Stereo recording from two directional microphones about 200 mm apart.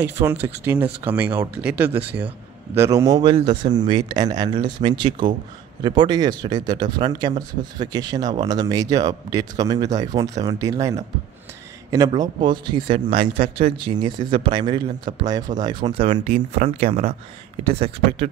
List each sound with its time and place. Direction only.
0.0 s a man's voice: 10° right (ahead or behind)
12.1 s speech: 25° right (ahead or behind)
16.1 s speech: 35° right (ahead or behind)
17.6 s speech: 30° right (ahead or behind)